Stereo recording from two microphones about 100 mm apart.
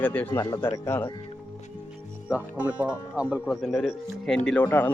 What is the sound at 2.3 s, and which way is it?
Speech, 15° right (ahead or behind).